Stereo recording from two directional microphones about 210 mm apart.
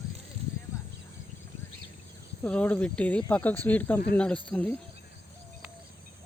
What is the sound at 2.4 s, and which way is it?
Speech, 5° left (ahead or behind).